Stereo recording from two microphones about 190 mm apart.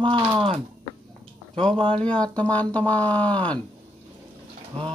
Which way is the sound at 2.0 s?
5° left (ahead or behind).